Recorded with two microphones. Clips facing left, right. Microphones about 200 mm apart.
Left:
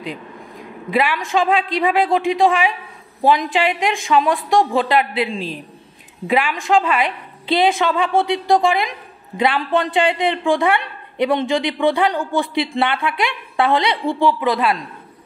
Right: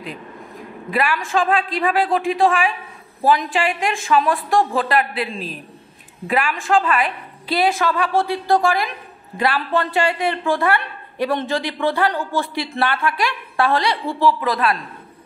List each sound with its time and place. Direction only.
0.8 s a woman's voice: 20° left (ahead or behind)